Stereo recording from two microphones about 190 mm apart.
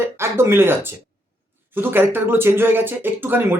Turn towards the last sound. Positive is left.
turn(degrees=-10)  # may be behind; listen again after turning